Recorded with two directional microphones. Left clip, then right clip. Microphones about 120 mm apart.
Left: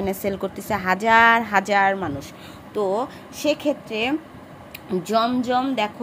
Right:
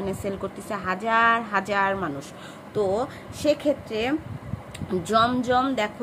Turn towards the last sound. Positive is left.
turn(degrees=25)  # may be behind; listen again after turning